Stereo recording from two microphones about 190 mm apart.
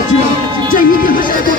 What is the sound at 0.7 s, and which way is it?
Speech, 45° left (ahead or behind).